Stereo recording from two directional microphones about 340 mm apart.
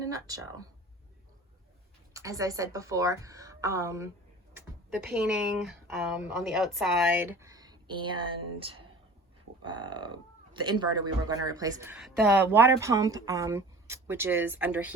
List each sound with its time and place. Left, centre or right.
0.0 s speech: centre
2.1 s speech: centre